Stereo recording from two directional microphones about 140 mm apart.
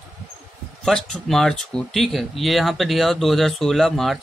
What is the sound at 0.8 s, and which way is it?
A man's voice, 5° left (ahead or behind).